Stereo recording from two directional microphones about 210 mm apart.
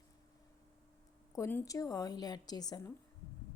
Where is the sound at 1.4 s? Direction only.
10° left (ahead or behind).